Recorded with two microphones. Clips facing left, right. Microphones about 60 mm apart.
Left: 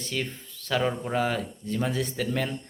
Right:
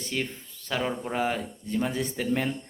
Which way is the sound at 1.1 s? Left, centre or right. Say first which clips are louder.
Left 1 dB; centre.